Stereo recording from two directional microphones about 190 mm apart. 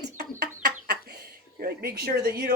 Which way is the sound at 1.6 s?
55° right (ahead or behind).